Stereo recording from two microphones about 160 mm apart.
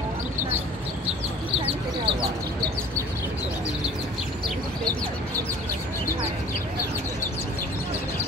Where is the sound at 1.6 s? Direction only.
35° right (ahead or behind).